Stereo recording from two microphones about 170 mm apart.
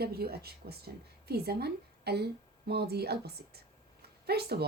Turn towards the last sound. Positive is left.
turn(degrees=-70)  # may be behind; listen again after turning